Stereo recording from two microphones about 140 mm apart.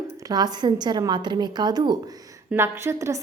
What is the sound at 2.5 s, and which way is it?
Speech, 20° right (ahead or behind).